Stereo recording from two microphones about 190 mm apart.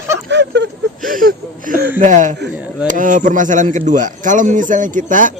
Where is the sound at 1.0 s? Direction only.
45° right (ahead or behind).